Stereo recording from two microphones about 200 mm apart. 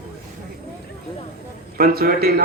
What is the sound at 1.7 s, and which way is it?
Speech, 50° right (ahead or behind).